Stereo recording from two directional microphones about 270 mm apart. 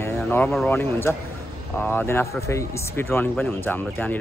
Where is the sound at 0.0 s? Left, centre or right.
Centre.